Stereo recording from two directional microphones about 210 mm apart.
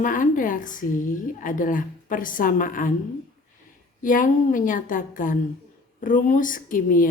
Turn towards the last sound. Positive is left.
turn(degrees=40)  # may be behind; listen again after turning